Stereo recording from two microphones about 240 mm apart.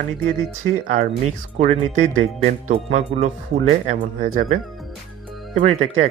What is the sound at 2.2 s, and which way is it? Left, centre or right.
A man's voice, right.